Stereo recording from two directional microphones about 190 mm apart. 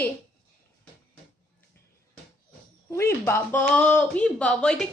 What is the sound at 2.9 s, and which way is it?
Speech, 15° left (ahead or behind).